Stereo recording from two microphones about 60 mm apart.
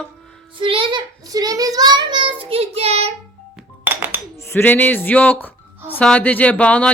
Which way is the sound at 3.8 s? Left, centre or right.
Right.